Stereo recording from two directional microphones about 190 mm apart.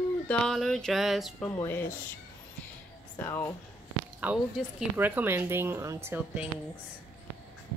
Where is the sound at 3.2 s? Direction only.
15° left (ahead or behind).